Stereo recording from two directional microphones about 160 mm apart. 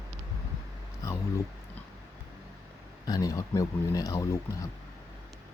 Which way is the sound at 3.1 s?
20° left (ahead or behind).